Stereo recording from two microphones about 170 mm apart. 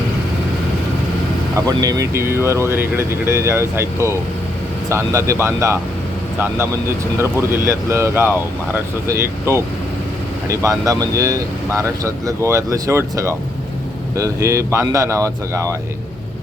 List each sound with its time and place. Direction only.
1.6 s speech: 20° right (ahead or behind)